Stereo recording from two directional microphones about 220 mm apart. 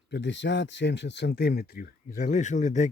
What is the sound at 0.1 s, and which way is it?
Speech, 55° left (ahead or behind).